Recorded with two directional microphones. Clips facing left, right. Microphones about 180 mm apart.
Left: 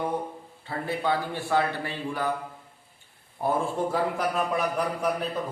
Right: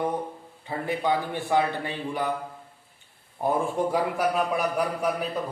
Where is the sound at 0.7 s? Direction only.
15° right (ahead or behind).